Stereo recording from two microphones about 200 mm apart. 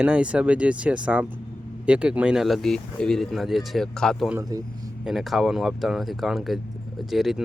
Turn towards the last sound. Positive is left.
turn(degrees=0)  # may be behind; listen again after turning